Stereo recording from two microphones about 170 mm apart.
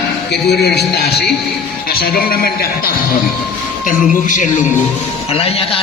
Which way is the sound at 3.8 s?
50° left (ahead or behind).